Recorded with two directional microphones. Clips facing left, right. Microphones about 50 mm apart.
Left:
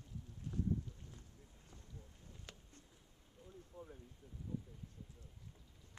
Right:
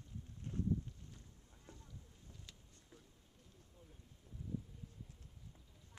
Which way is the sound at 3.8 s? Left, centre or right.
Left.